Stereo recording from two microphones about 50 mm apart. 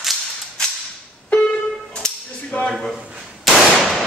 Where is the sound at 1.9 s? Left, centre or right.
Centre.